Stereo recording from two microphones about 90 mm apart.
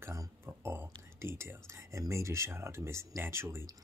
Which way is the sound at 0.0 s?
30° right (ahead or behind).